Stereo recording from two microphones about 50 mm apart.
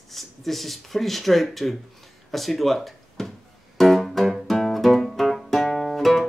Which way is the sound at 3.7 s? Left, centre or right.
Centre.